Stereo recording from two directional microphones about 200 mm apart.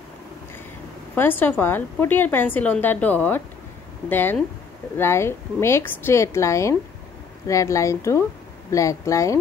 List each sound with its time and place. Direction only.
1.1 s a woman's voice: 10° left (ahead or behind)